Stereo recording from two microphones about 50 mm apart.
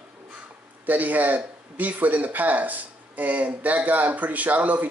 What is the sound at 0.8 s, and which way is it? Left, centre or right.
Speech, right.